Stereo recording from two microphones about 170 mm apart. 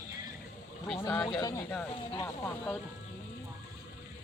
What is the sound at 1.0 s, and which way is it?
Speech, 20° left (ahead or behind).